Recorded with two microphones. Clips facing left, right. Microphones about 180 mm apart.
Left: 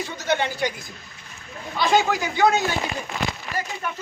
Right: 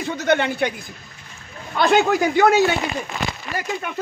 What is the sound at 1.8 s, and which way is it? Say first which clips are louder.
Speech: right 4 dB; 55° right (ahead or behind).